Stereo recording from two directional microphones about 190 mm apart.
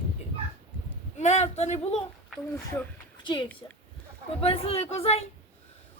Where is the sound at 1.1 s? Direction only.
35° left (ahead or behind).